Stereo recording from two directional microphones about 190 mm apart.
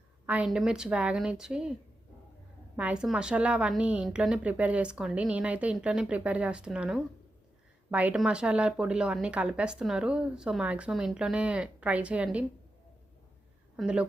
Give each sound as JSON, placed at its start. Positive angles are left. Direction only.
{"t": 0.3, "sound": "a woman's voice", "side_deg": -5}
{"t": 2.7, "sound": "a woman's voice", "side_deg": -5}
{"t": 13.7, "sound": "a woman's voice", "side_deg": -5}